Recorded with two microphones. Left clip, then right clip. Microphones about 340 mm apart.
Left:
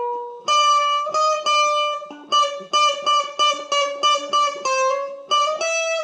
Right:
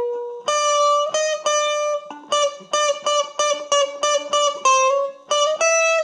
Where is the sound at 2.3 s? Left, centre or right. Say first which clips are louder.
Left 2 dB; right.